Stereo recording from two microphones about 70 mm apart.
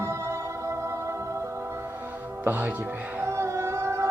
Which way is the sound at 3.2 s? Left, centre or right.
Right.